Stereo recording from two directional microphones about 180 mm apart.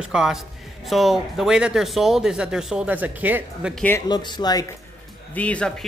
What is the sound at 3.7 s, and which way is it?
Speech, 10° left (ahead or behind).